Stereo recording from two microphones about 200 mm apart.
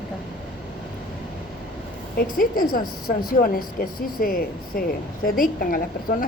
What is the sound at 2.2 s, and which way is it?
A woman's voice, 45° left (ahead or behind).